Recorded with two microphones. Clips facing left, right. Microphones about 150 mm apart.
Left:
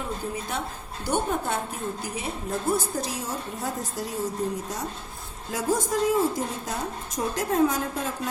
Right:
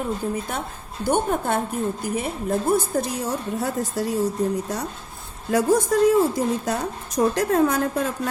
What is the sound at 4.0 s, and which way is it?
Speech, 65° right (ahead or behind).